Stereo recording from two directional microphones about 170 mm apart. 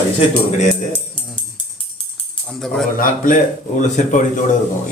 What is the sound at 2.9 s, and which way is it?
A man's voice, 55° left (ahead or behind).